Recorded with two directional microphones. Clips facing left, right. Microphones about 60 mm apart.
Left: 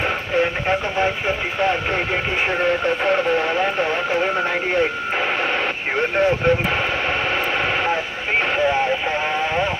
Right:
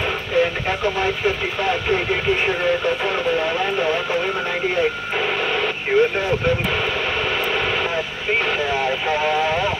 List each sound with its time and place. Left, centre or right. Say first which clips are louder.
0.4 s speech: right 1 dB; left
2.6 s speech: left 1 dB; left
5.9 s speech: right 1 dB; left
9.2 s speech: right 2 dB; centre